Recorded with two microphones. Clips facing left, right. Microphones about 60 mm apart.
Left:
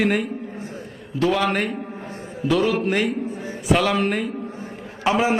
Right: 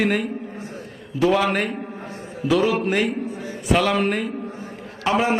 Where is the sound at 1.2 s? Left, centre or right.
Centre.